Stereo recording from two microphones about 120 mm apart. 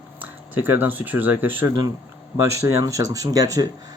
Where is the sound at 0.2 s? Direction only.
15° right (ahead or behind).